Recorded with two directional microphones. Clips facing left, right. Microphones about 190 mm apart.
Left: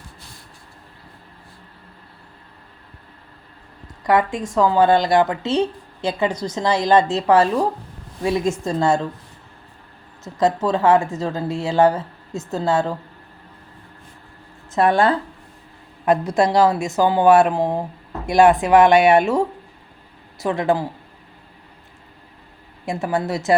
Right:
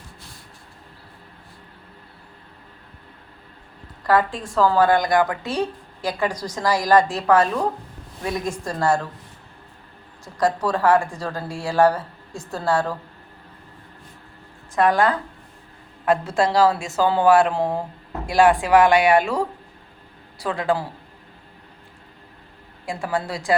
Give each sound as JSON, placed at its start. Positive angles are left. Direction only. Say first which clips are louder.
{"t": 4.5, "sound": "a woman's voice", "louder": "left 2 dB", "side_deg": 20}
{"t": 10.2, "sound": "a woman's voice", "louder": "left 3 dB", "side_deg": 25}
{"t": 14.8, "sound": "a woman's voice", "louder": "left 2 dB", "side_deg": 25}
{"t": 22.9, "sound": "a woman's voice", "louder": "left 4 dB", "side_deg": 20}